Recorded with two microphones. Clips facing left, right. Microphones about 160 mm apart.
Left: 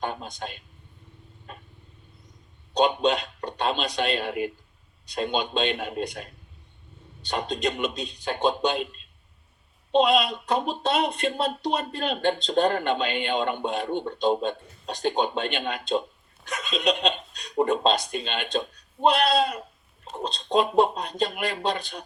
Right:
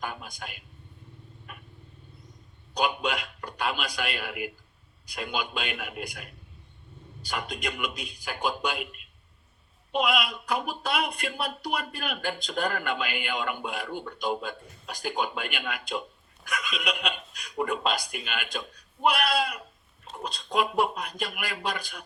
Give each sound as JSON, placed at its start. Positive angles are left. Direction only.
{"t": 0.0, "sound": "speech", "side_deg": 30}
{"t": 1.5, "sound": "vehicle", "side_deg": 30}
{"t": 2.7, "sound": "speech", "side_deg": 30}